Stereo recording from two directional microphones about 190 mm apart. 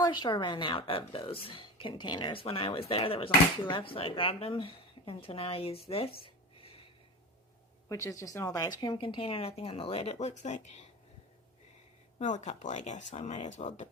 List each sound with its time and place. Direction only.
0.0 s a woman's voice: 25° left (ahead or behind)
5.9 s a sound: 30° left (ahead or behind)
7.9 s a woman's voice: 15° left (ahead or behind); by 10.8 s 40° left (ahead or behind)
12.2 s speech: 40° left (ahead or behind)